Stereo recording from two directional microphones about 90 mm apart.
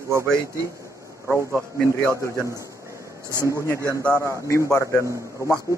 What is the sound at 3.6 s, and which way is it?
A man's voice, 35° left (ahead or behind).